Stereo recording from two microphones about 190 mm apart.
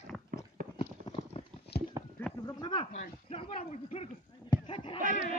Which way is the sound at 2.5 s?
25° left (ahead or behind).